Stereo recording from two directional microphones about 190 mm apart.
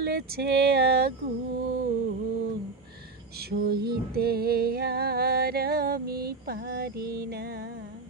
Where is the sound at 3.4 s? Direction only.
55° right (ahead or behind).